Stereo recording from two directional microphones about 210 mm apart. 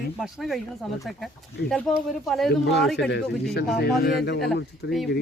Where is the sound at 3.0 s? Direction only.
60° left (ahead or behind).